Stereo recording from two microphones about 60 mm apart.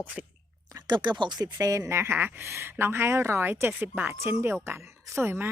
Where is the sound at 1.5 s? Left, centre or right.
Right.